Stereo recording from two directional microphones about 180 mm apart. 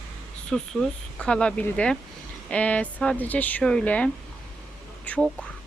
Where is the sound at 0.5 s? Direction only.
5° left (ahead or behind).